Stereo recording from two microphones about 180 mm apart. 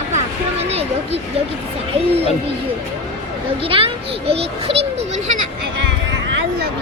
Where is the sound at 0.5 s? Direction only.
35° right (ahead or behind).